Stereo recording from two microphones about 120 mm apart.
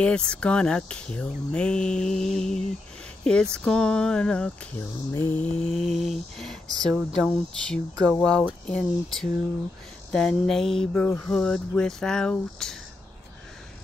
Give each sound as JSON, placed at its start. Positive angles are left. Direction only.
{"t": 0.0, "sound": "speech", "side_deg": 10}